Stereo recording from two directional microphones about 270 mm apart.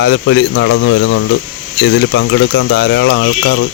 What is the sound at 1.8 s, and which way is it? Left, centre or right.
Speech, left.